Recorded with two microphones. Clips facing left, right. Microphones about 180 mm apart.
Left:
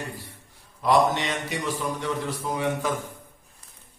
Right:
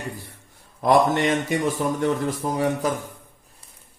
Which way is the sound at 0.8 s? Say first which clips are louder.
Right 3 dB; 50° right (ahead or behind).